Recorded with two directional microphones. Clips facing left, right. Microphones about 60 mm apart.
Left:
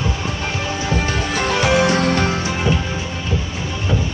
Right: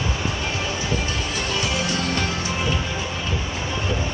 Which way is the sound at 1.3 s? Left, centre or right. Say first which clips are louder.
Left 10 dB; left.